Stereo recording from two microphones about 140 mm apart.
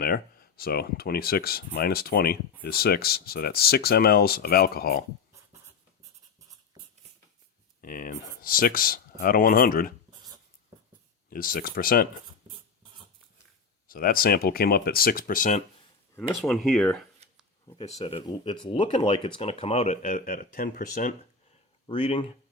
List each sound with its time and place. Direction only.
0.0 s speech: 90° left
7.8 s speech: 90° left
11.3 s speech: 90° left
13.8 s speech: 90° left; by 15.6 s 65° left (ahead or behind)
16.3 s speech: centre (ahead or behind)
17.8 s speech: 45° left (ahead or behind); by 21.2 s 70° left (ahead or behind)
21.8 s speech: 35° left (ahead or behind)